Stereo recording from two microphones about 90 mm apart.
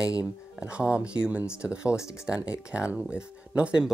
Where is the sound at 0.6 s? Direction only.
10° right (ahead or behind).